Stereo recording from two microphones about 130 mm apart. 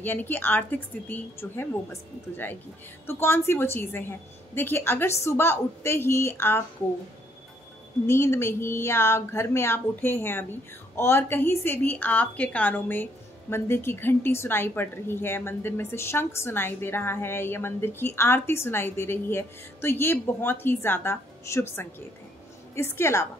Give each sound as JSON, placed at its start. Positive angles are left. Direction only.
{"t": 0.0, "sound": "a woman's voice", "side_deg": 15}
{"t": 8.1, "sound": "a woman's voice", "side_deg": 20}